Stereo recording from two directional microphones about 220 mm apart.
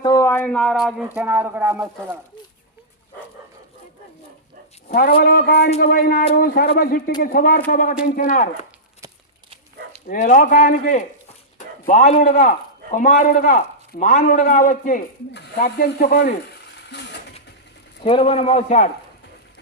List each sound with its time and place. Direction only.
0.0 s speech: 15° left (ahead or behind); by 2.1 s 10° right (ahead or behind)
4.9 s a man's voice: 40° left (ahead or behind)
10.1 s a man's voice: 35° left (ahead or behind)
15.3 s speech: 45° left (ahead or behind)
18.0 s a man's voice: 25° left (ahead or behind)